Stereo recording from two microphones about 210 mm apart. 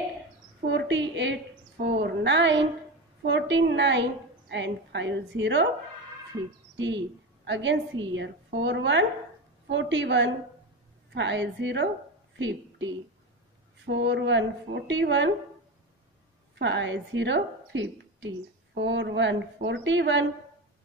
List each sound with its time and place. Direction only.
0.7 s a woman's voice: 60° right (ahead or behind)
7.4 s a woman's voice: 60° right (ahead or behind)
16.5 s a woman's voice: 60° right (ahead or behind)